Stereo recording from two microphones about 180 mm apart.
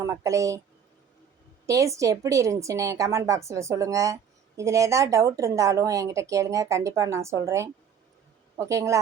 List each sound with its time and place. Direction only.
0.0 s a woman's voice: 15° right (ahead or behind)
1.6 s a woman's voice: 15° right (ahead or behind)